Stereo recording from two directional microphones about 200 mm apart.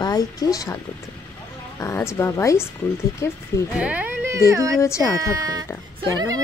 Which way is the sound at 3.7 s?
5° right (ahead or behind).